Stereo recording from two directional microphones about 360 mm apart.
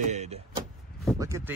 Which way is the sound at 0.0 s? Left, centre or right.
Centre.